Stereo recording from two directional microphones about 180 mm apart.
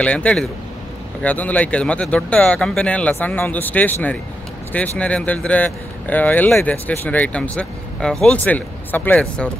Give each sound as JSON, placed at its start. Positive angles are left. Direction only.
{"t": 0.0, "sound": "speech", "side_deg": 5}